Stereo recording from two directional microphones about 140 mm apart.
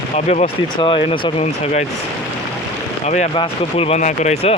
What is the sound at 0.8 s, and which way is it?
Speech, 35° left (ahead or behind).